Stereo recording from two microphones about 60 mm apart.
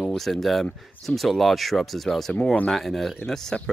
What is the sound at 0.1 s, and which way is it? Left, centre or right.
Speech, centre.